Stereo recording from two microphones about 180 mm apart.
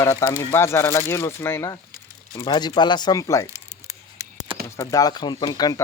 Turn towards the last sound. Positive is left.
turn(degrees=20)  # may be behind; listen again after turning